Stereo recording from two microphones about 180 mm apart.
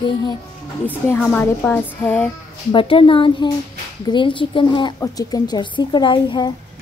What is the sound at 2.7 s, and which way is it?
A woman's voice, 30° left (ahead or behind).